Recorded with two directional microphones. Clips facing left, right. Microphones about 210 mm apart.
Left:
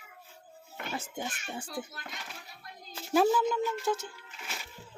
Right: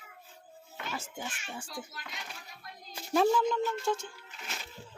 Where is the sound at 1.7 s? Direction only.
55° left (ahead or behind).